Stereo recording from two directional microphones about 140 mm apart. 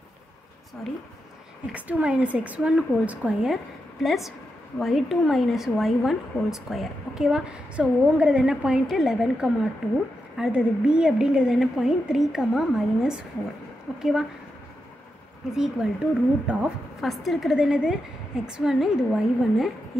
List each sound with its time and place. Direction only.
1.7 s a woman's voice: 10° right (ahead or behind)
15.5 s a woman's voice: 5° right (ahead or behind)